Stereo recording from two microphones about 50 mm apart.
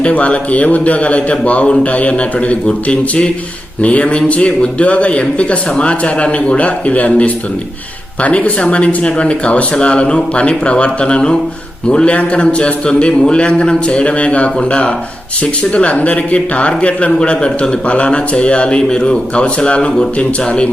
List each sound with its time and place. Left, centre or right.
0.0 s speech: left